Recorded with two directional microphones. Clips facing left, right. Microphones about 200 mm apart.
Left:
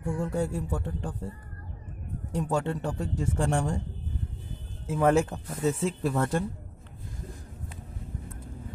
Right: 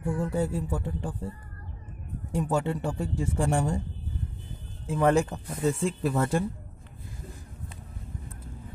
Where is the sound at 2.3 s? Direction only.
5° right (ahead or behind).